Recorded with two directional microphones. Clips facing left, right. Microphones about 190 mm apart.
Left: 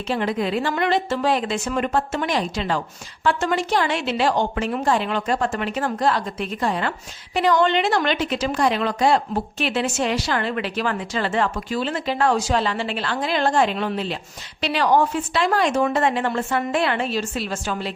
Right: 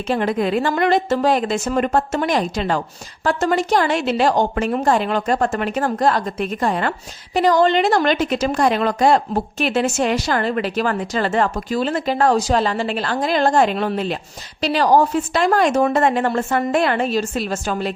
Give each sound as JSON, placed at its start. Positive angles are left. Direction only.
{"t": 0.1, "sound": "a woman's voice", "side_deg": -50}
{"t": 7.3, "sound": "a woman's voice", "side_deg": -40}